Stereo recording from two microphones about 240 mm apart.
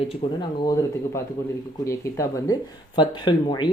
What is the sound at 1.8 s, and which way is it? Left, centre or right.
Speech, centre.